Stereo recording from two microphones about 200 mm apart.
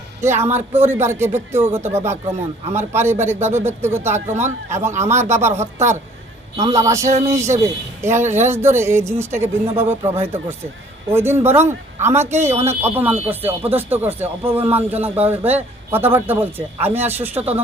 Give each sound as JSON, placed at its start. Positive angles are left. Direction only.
{"t": 0.2, "sound": "speech", "side_deg": -10}
{"t": 7.0, "sound": "speech", "side_deg": -35}
{"t": 7.3, "sound": "speech", "side_deg": -15}